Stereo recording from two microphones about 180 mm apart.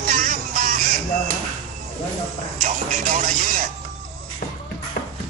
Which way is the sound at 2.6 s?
40° right (ahead or behind).